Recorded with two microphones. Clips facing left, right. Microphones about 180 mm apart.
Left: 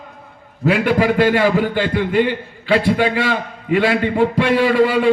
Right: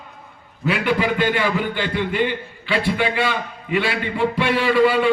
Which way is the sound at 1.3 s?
35° left (ahead or behind).